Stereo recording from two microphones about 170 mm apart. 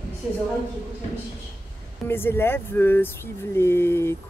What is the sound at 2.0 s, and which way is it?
Speech, 15° left (ahead or behind).